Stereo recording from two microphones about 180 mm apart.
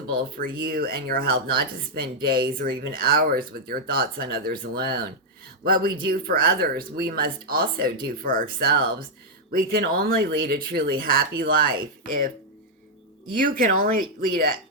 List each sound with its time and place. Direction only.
0.1 s speech: 55° right (ahead or behind)
13.3 s speech: 50° right (ahead or behind)